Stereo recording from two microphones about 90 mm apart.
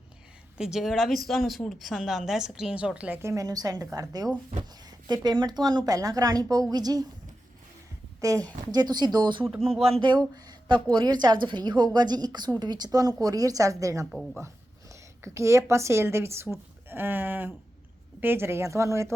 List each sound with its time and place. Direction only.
0.6 s a woman's voice: 5° right (ahead or behind)
3.2 s a woman's voice: 30° right (ahead or behind)
3.4 s a woman's voice: 45° right (ahead or behind)
8.2 s a woman's voice: 40° right (ahead or behind)
16.9 s a sound: 20° right (ahead or behind)
18.2 s a woman's voice: 25° right (ahead or behind)